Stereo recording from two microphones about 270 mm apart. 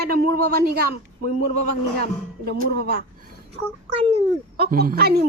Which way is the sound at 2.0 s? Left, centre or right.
Right.